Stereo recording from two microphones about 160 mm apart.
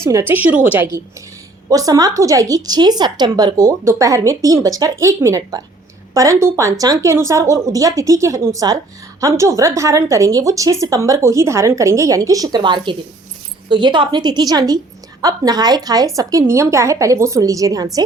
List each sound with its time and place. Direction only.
0.0 s a woman's voice: 20° right (ahead or behind)